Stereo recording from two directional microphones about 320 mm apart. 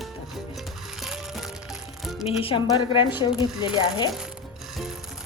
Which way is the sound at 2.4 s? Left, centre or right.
Centre.